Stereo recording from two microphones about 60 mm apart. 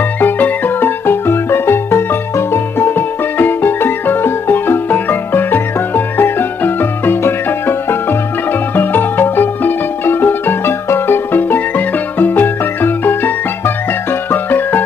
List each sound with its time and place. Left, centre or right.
0.2 s music: left